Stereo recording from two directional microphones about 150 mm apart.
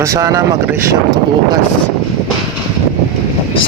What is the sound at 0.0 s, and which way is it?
Speech, 20° right (ahead or behind).